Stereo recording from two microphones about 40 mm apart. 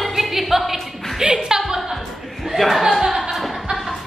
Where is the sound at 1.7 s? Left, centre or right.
Centre.